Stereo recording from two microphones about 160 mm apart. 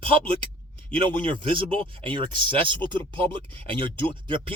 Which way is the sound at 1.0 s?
30° right (ahead or behind).